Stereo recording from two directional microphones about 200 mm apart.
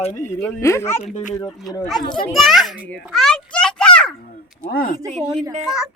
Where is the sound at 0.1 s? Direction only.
15° left (ahead or behind).